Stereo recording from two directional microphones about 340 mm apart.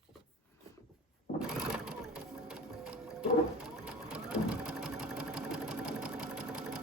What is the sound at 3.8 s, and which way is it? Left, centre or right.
Sewing machine, centre.